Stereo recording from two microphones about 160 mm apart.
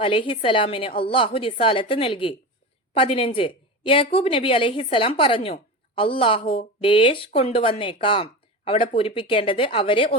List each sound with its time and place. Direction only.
0.0 s a woman's voice: 35° left (ahead or behind)